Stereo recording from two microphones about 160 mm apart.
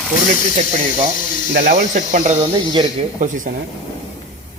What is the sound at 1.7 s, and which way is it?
Cricket, 50° right (ahead or behind).